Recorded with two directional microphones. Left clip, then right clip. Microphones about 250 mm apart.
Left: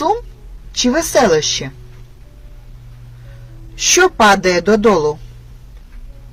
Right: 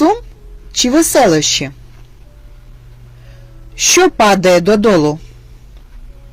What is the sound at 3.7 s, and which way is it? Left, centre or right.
Speech, right.